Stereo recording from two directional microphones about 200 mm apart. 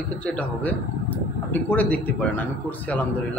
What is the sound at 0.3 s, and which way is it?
Speech, 5° left (ahead or behind).